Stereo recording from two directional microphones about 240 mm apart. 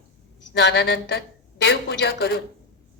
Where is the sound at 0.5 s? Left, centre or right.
Left.